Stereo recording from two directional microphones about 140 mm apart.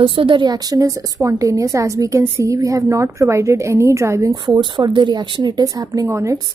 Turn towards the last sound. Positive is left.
turn(degrees=-20)  # may be behind; listen again after turning